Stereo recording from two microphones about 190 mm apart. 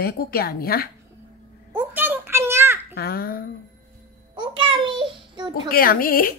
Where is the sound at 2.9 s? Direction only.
55° left (ahead or behind).